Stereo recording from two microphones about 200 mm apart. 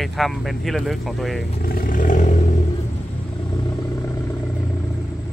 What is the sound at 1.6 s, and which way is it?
Roar, 50° left (ahead or behind).